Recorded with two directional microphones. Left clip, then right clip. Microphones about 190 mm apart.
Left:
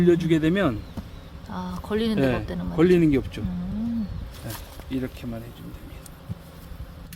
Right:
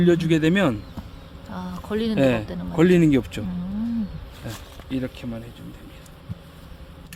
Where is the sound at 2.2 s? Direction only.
60° right (ahead or behind).